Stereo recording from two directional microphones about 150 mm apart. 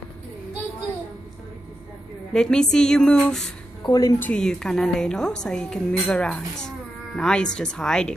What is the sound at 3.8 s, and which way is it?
Speech, 25° left (ahead or behind).